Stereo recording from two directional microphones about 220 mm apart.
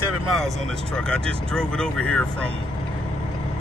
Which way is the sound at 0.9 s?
5° left (ahead or behind).